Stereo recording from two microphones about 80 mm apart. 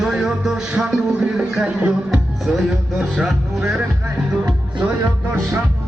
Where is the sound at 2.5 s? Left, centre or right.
Centre.